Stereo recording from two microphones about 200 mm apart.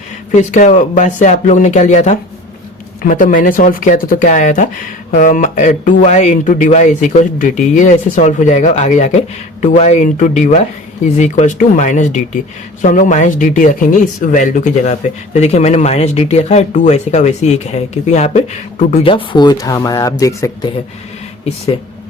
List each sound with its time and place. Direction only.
0.3 s speech: 35° left (ahead or behind)
19.0 s speech: 25° left (ahead or behind)